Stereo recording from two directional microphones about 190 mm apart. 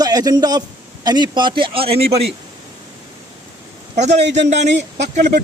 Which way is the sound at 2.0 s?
60° right (ahead or behind).